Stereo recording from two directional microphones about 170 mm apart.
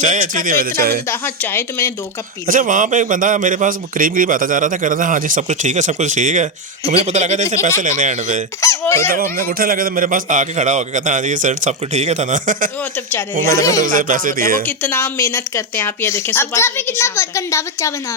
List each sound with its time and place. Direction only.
0.0 s a man's voice: 50° right (ahead or behind)
1.2 s speech: 15° left (ahead or behind)
2.5 s a man's voice: 50° right (ahead or behind)
8.6 s speech: 15° left (ahead or behind)
9.1 s a man's voice: 60° right (ahead or behind)
13.5 s speech: 20° left (ahead or behind)
13.8 s a man's voice: 50° right (ahead or behind)
14.8 s speech: 10° left (ahead or behind)